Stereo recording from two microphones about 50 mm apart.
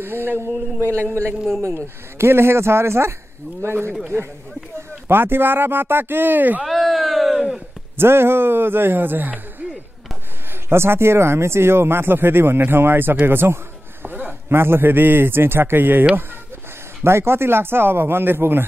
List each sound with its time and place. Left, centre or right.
0.0 s speech: right
1.6 s speech: right
4.7 s speech: right
6.6 s a sound: centre
8.0 s speech: right
10.7 s speech: right
17.0 s speech: right